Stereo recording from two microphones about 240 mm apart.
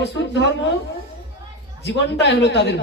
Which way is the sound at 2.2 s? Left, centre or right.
Left.